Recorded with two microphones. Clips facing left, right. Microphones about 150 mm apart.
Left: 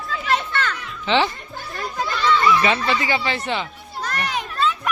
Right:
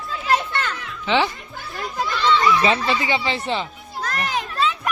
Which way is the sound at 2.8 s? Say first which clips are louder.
Even; 20° right (ahead or behind).